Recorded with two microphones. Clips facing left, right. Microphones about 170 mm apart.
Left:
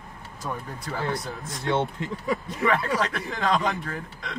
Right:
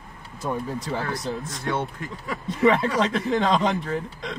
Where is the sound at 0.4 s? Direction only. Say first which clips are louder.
Right 5 dB; 30° right (ahead or behind).